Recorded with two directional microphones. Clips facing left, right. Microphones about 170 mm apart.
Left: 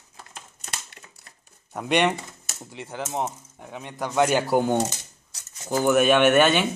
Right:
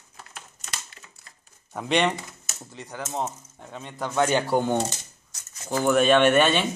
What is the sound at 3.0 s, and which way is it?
Speech, 10° left (ahead or behind).